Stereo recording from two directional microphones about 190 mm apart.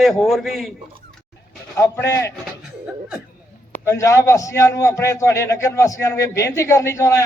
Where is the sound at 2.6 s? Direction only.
5° right (ahead or behind).